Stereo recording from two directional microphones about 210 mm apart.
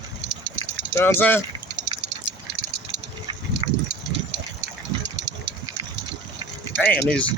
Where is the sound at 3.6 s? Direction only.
25° right (ahead or behind).